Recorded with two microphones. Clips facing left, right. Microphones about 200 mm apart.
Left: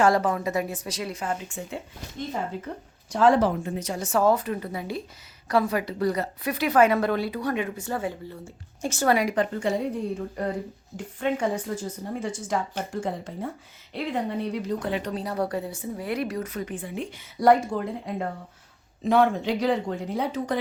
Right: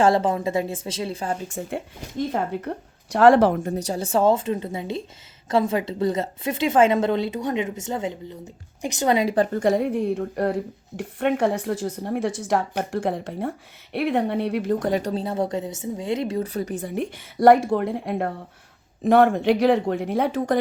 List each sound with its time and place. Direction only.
0.0 s a woman's voice: 25° right (ahead or behind)
1.6 s a woman's voice: 45° right (ahead or behind)
2.3 s a woman's voice: 60° right (ahead or behind)
3.6 s a woman's voice: 35° right (ahead or behind)
9.5 s a woman's voice: 45° right (ahead or behind)
9.8 s a woman's voice: 65° right (ahead or behind)
14.8 s a woman's voice: 40° right (ahead or behind)
17.2 s a woman's voice: 65° right (ahead or behind)